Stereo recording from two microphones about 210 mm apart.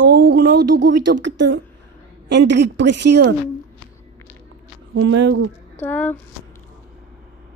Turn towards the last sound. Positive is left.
turn(degrees=10)  # may be behind; listen again after turning